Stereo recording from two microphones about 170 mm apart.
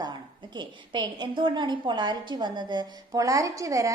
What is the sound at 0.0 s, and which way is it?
A woman's voice, 25° right (ahead or behind).